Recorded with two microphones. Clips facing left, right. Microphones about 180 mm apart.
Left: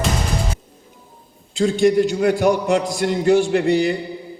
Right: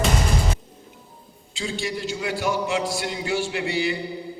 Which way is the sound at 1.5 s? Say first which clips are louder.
Left 14 dB; 50° left (ahead or behind).